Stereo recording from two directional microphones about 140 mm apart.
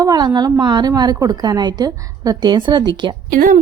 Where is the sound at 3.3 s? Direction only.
90° right.